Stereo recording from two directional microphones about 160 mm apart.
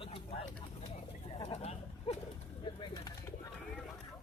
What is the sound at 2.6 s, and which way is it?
Bird, 30° left (ahead or behind).